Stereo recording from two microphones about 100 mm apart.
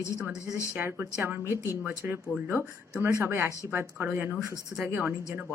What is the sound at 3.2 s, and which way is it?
Speech, 25° right (ahead or behind).